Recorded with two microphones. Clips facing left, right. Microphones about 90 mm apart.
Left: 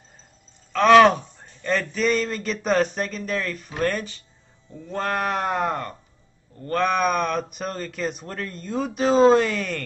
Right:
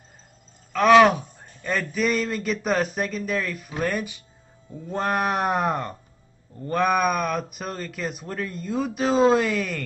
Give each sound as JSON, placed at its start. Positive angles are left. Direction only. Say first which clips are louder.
{"t": 0.7, "sound": "speech", "louder": "left 1 dB", "side_deg": -5}